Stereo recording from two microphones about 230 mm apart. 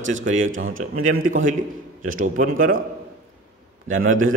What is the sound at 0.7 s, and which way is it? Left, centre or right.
Speech, right.